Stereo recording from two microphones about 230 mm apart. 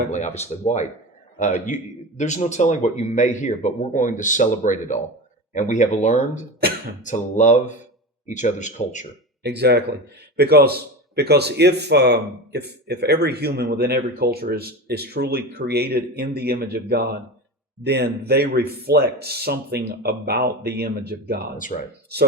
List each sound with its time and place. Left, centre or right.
0.1 s a man's voice: left
9.4 s a man's voice: right